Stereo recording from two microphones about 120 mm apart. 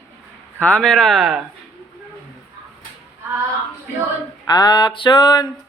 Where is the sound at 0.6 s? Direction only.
10° left (ahead or behind).